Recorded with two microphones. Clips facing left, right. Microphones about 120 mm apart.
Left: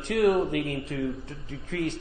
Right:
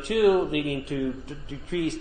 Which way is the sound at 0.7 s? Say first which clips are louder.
Right 2 dB; 20° right (ahead or behind).